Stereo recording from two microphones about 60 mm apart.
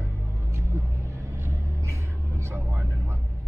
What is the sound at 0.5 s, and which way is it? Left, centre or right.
Vehicle, right.